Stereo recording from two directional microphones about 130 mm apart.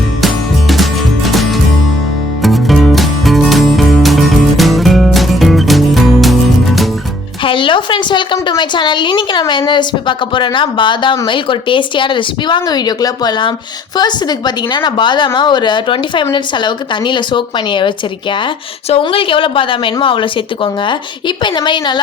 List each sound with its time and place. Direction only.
0.2 s music: centre (ahead or behind)
7.4 s a sound: 40° left (ahead or behind)
11.3 s a woman's voice: 40° left (ahead or behind)